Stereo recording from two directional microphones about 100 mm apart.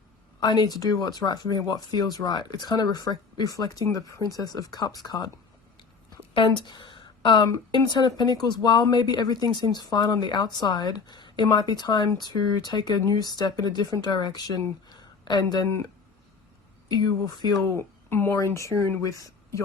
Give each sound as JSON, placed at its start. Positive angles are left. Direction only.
{"t": 0.3, "sound": "speech", "side_deg": 45}
{"t": 6.3, "sound": "a woman's voice", "side_deg": 60}
{"t": 17.0, "sound": "speech", "side_deg": 45}
{"t": 17.7, "sound": "speech", "side_deg": 25}